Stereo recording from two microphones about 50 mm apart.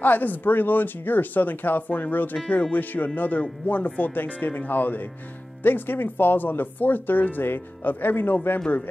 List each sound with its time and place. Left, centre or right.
0.0 s speech: left